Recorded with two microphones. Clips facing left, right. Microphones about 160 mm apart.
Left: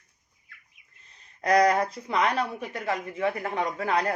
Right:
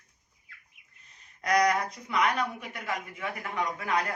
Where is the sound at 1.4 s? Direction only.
35° left (ahead or behind).